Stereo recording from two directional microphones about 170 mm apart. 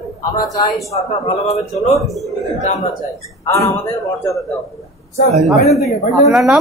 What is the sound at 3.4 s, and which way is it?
Speech, 15° left (ahead or behind).